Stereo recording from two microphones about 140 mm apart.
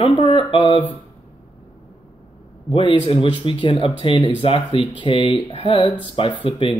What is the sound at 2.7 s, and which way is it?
Speech, 35° left (ahead or behind).